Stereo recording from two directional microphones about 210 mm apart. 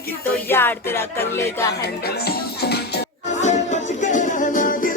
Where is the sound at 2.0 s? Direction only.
50° left (ahead or behind).